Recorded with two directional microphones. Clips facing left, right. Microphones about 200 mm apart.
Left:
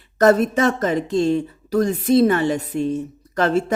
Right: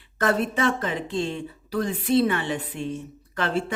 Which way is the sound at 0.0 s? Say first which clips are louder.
Left 9 dB; 40° left (ahead or behind).